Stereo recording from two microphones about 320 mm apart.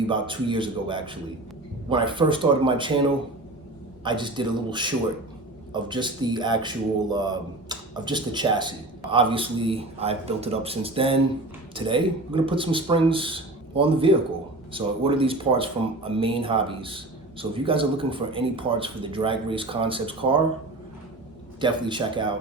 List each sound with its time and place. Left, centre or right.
0.1 s speech: centre
21.6 s speech: centre